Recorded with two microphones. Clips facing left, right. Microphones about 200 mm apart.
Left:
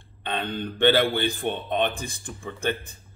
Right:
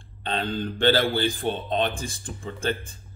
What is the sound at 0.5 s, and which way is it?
Speech, 20° left (ahead or behind).